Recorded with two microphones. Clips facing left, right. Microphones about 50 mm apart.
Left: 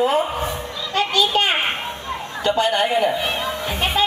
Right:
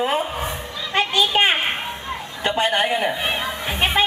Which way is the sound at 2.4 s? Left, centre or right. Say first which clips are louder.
Left 1 dB; right.